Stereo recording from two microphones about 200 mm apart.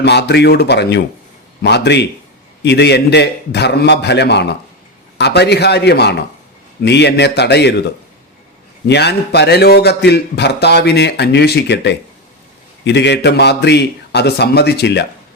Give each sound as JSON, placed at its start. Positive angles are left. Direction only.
{"t": 0.0, "sound": "a man's voice", "side_deg": 55}
{"t": 8.9, "sound": "a man's voice", "side_deg": 55}